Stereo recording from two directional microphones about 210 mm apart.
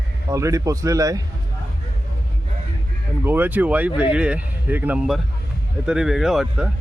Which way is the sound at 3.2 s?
10° right (ahead or behind).